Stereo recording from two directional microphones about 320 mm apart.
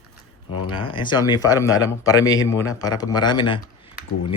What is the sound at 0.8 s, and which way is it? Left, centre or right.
A man's voice, centre.